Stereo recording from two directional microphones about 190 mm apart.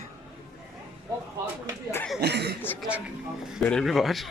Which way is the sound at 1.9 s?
5° left (ahead or behind).